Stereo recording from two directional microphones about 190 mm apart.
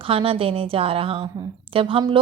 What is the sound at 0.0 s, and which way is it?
A woman's voice, 30° right (ahead or behind).